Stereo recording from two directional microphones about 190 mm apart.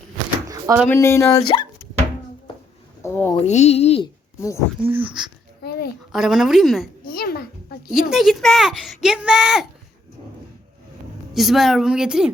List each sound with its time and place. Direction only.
0.4 s a sound: 20° right (ahead or behind)
0.9 s speech: 15° left (ahead or behind)
3.0 s speech: 10° left (ahead or behind)
3.4 s speech: 35° left (ahead or behind)
4.4 s speech: 15° left (ahead or behind)
4.9 s speech: 10° right (ahead or behind)
5.6 s a sound: 55° left (ahead or behind)
6.1 s speech: centre (ahead or behind)
7.1 s a sound: 50° left (ahead or behind)
7.9 s speech: centre (ahead or behind)
11.3 s speech: centre (ahead or behind)